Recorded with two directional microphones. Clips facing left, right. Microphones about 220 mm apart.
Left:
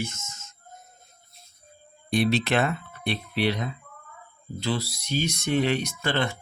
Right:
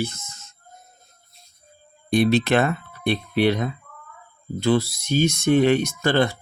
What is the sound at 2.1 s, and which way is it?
Speech, 50° right (ahead or behind).